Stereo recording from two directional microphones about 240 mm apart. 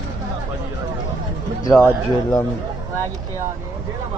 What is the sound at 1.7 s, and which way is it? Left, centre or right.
Speech, centre.